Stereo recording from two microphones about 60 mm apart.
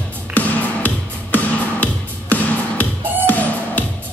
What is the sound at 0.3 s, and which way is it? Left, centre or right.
Music, left.